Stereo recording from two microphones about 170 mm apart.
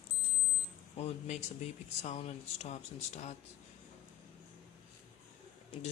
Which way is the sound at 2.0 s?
40° left (ahead or behind).